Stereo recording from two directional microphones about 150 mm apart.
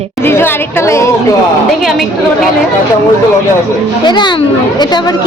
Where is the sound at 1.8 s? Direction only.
Centre (ahead or behind).